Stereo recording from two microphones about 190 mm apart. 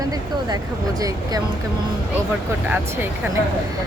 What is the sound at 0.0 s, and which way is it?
Speech, 20° right (ahead or behind).